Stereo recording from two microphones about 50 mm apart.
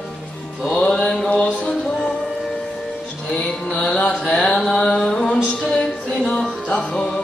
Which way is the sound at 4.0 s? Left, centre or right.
Left.